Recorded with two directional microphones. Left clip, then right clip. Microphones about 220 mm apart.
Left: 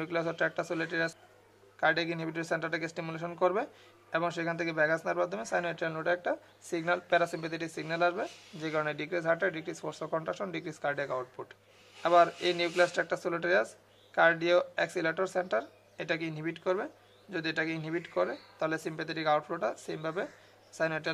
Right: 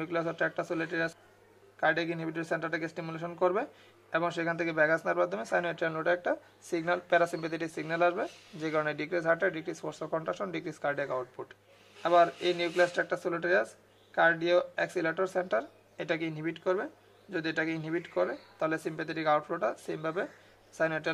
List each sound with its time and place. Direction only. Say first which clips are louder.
0.0 s a man's voice: even; centre (ahead or behind)